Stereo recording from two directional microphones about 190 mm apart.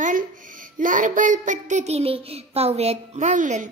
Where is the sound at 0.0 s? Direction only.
45° right (ahead or behind).